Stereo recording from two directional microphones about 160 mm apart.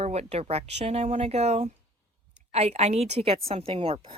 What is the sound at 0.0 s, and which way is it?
Speech, 40° right (ahead or behind).